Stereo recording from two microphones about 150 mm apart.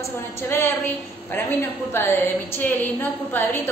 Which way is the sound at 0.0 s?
15° left (ahead or behind).